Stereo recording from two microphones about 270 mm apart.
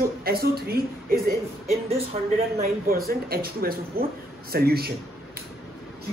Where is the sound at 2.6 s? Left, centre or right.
Right.